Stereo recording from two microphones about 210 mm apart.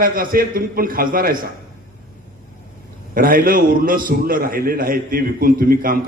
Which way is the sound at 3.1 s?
40° right (ahead or behind).